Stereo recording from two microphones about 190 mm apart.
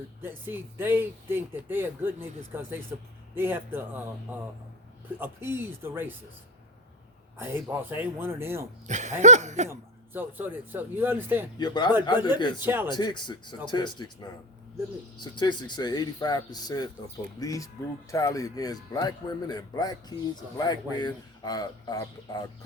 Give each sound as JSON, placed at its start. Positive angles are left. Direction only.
{"t": 0.2, "sound": "speech", "side_deg": -10}
{"t": 7.3, "sound": "speech", "side_deg": -10}
{"t": 8.9, "sound": "a sound", "side_deg": -40}
{"t": 9.6, "sound": "speech", "side_deg": -10}
{"t": 11.5, "sound": "speech", "side_deg": 20}
{"t": 12.6, "sound": "speech", "side_deg": -10}
{"t": 12.9, "sound": "speech", "side_deg": 20}